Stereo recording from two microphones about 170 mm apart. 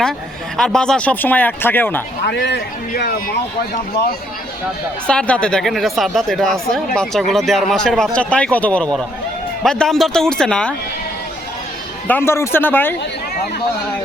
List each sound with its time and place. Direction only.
0.5 s speech: 5° left (ahead or behind)
2.2 s speech: 90° left; by 3.2 s 65° left (ahead or behind)
5.0 s speech: 5° left (ahead or behind)
12.0 s speech: 15° left (ahead or behind)